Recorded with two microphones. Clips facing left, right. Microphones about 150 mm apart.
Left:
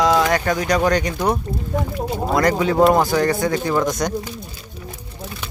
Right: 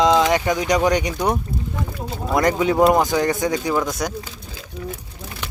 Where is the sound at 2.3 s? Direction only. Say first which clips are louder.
Even; 20° right (ahead or behind).